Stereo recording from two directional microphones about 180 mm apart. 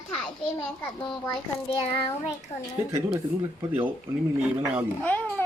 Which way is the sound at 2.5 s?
40° left (ahead or behind).